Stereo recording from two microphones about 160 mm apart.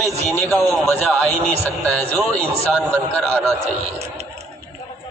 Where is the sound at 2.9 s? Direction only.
5° left (ahead or behind).